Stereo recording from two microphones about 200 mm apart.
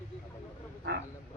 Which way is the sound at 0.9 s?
55° right (ahead or behind).